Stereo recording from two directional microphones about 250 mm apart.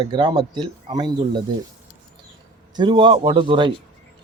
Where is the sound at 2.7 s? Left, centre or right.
Centre.